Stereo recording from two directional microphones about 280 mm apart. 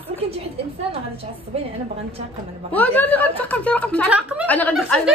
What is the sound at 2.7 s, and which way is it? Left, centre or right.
A woman's voice, centre.